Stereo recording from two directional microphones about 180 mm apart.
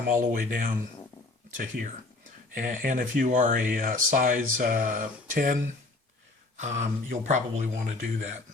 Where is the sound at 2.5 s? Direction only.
45° right (ahead or behind).